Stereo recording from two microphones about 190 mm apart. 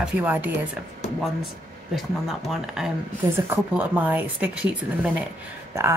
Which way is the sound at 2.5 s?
5° right (ahead or behind).